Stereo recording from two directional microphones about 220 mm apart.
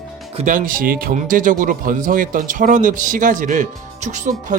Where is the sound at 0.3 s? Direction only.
35° right (ahead or behind).